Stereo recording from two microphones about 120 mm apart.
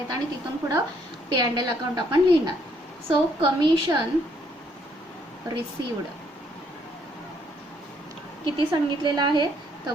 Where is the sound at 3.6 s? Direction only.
35° right (ahead or behind).